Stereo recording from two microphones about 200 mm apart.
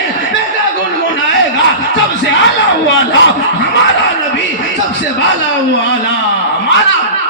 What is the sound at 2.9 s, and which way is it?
Speech, 70° left (ahead or behind).